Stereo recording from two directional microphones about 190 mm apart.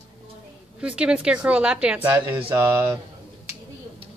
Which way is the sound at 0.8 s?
5° right (ahead or behind).